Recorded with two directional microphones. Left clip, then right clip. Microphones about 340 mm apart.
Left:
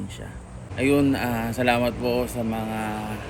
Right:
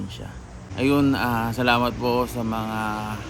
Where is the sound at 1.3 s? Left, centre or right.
Right.